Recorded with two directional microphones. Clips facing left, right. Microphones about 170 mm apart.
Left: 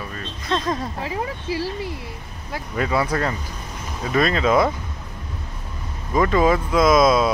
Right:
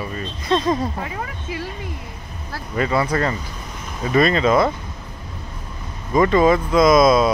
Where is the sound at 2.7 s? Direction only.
5° left (ahead or behind).